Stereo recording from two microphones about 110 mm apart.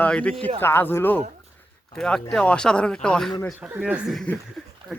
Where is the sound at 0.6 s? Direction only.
20° left (ahead or behind).